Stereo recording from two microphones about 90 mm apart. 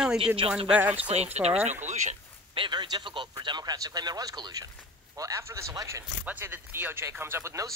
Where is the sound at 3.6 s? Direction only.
45° right (ahead or behind).